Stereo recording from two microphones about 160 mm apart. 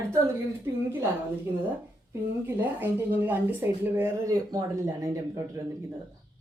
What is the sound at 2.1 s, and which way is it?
A woman's voice, 10° right (ahead or behind).